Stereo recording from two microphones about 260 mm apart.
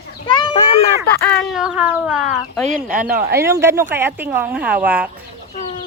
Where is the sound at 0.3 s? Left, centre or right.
Centre.